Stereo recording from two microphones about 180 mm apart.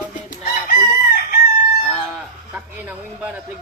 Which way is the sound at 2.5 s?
10° right (ahead or behind).